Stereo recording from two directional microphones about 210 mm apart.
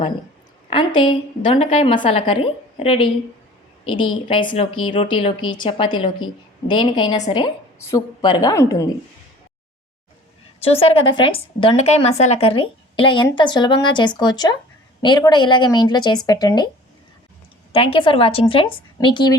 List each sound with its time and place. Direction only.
0.7 s speech: 20° left (ahead or behind)
10.6 s speech: 25° left (ahead or behind)
17.7 s speech: 25° left (ahead or behind)